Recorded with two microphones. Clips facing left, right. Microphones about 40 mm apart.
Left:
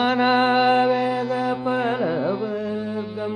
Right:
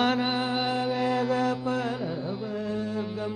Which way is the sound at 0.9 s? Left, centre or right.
Centre.